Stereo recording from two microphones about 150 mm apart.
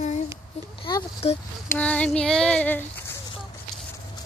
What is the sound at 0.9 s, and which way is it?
Speech, 30° left (ahead or behind).